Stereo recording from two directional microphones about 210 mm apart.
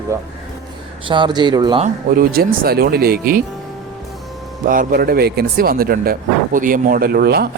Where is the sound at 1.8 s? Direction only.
45° right (ahead or behind).